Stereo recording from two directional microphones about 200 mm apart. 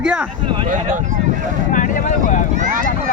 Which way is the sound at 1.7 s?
40° left (ahead or behind).